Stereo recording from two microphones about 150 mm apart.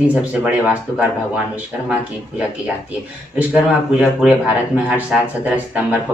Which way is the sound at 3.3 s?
5° right (ahead or behind).